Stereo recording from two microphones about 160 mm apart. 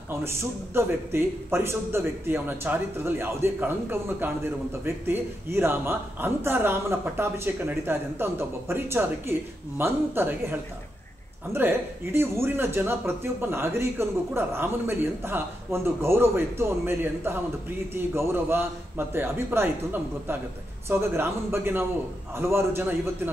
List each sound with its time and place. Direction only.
0.2 s a man's voice: 15° right (ahead or behind)